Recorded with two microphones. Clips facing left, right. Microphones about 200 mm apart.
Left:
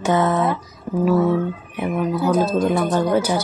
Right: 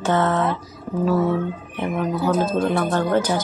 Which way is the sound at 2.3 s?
15° left (ahead or behind).